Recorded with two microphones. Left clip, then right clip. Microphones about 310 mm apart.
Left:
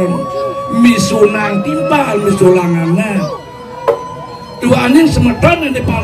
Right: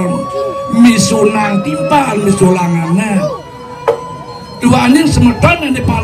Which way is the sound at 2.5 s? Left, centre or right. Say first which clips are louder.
Left 3 dB; centre.